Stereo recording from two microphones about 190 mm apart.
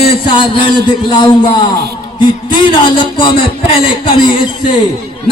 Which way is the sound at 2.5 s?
25° left (ahead or behind).